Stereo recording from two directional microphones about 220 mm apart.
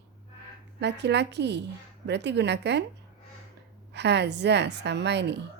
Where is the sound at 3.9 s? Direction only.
50° right (ahead or behind).